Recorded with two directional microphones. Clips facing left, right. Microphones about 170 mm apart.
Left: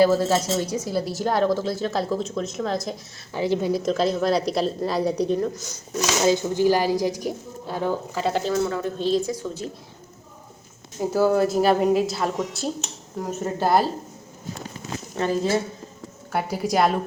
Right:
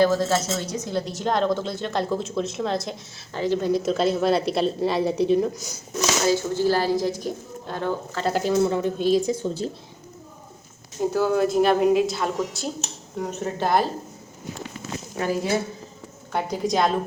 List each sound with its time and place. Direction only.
0.0 s speech: 10° left (ahead or behind)
3.3 s speech: 10° left (ahead or behind); by 5.8 s 10° right (ahead or behind)
6.2 s speech: 15° left (ahead or behind)
8.3 s speech: 5° right (ahead or behind)
8.5 s a woman's voice: 20° right (ahead or behind)
9.3 s a woman's voice: 30° right (ahead or behind)
11.1 s speech: 5° left (ahead or behind)
15.1 s speech: 10° right (ahead or behind)
16.3 s speech: 5° left (ahead or behind)